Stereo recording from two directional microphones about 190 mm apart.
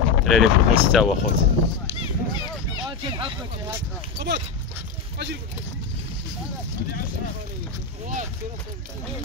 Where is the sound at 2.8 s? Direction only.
25° right (ahead or behind).